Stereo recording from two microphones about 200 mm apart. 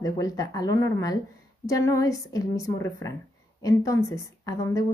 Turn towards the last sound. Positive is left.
turn(degrees=15)  # may be behind; listen again after turning